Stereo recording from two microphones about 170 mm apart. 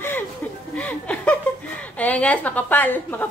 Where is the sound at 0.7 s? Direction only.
10° left (ahead or behind).